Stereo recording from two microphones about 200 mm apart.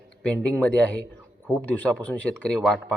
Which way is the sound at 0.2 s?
5° left (ahead or behind).